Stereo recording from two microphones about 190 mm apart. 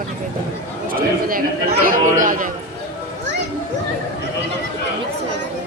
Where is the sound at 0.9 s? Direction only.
50° right (ahead or behind).